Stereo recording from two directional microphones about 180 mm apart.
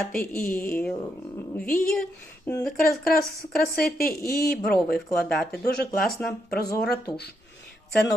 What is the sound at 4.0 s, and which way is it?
Speech, 55° left (ahead or behind).